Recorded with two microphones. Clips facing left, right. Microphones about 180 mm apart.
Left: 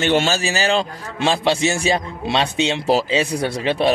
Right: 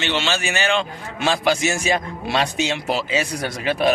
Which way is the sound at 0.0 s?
45° left (ahead or behind).